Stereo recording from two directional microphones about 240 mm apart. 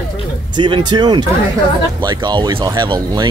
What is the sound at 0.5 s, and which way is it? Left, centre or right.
Speech, centre.